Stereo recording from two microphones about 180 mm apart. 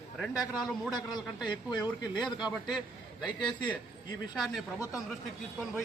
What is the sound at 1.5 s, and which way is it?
Speech, 25° left (ahead or behind).